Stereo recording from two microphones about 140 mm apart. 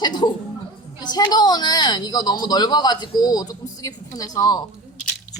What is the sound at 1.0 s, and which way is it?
Speech, 30° left (ahead or behind).